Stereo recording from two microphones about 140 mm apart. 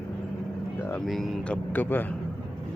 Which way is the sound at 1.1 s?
Centre (ahead or behind).